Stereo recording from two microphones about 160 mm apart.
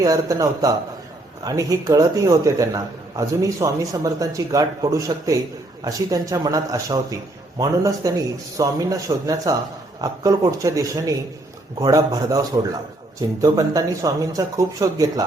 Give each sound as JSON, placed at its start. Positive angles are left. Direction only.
{"t": 0.0, "sound": "a man's voice", "side_deg": -20}
{"t": 13.4, "sound": "a man's voice", "side_deg": -25}